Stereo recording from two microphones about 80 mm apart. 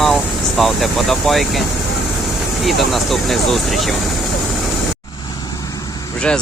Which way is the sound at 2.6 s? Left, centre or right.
Centre.